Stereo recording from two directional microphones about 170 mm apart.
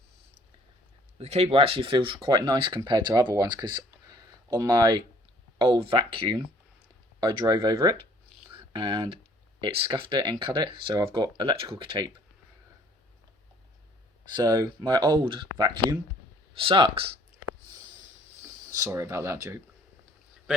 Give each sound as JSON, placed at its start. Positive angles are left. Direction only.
{"t": 1.2, "sound": "speech", "side_deg": -35}
{"t": 14.3, "sound": "speech", "side_deg": -25}
{"t": 18.7, "sound": "speech", "side_deg": -20}